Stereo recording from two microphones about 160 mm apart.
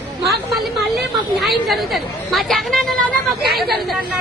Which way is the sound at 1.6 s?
Centre (ahead or behind).